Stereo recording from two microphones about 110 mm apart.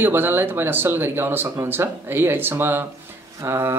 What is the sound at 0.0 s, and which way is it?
Speech, 20° right (ahead or behind).